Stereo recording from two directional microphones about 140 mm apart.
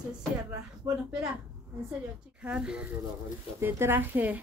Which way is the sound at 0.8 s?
15° right (ahead or behind).